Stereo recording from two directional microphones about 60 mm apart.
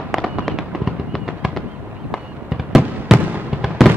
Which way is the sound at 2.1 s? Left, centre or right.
Centre.